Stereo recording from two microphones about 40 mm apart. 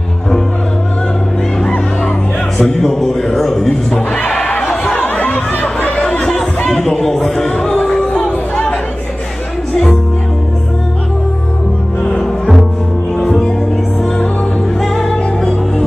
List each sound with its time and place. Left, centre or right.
2.5 s a man's voice: centre
4.5 s chatter: left
4.9 s chatter: left
6.0 s chatter: left
6.7 s a sound: centre
7.8 s music: centre
8.1 s a sound: left
12.0 s music: left
14.8 s music: centre